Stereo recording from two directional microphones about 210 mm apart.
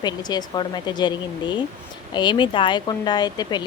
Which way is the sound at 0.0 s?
20° left (ahead or behind).